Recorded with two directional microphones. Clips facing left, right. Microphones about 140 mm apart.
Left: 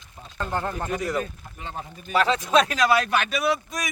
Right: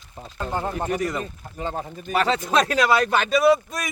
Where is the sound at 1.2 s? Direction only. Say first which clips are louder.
Right 4 dB; 35° right (ahead or behind).